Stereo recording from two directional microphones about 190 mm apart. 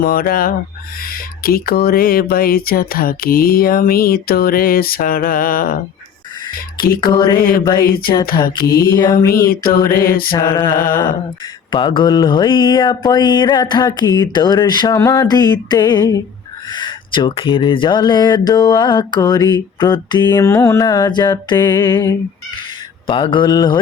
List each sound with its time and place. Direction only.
0.0 s speech: 50° left (ahead or behind)
7.0 s speech: 20° left (ahead or behind)
7.8 s speech: 50° left (ahead or behind)
8.8 s speech: 20° left (ahead or behind)
9.1 s speech: 50° left (ahead or behind)
10.3 s speech: 25° left (ahead or behind)
10.7 s speech: 50° left (ahead or behind)
11.7 s speech: 25° left (ahead or behind)